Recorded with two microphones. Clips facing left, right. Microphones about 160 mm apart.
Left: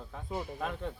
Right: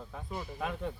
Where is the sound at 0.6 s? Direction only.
Centre (ahead or behind).